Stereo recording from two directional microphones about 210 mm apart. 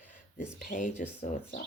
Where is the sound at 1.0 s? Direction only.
50° left (ahead or behind).